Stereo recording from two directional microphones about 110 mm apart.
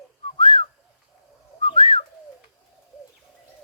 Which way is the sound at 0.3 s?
50° left (ahead or behind).